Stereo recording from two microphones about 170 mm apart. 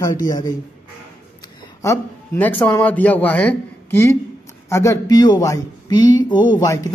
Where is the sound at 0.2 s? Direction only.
20° left (ahead or behind).